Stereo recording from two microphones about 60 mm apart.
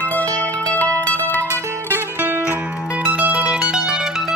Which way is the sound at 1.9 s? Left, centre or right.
Right.